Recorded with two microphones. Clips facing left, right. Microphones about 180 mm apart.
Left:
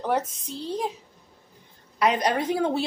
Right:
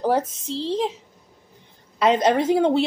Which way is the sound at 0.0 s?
30° right (ahead or behind).